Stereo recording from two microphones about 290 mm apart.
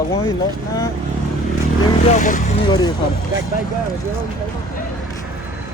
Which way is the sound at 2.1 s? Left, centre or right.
Left.